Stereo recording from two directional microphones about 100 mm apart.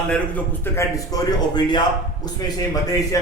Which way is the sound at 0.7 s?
35° left (ahead or behind).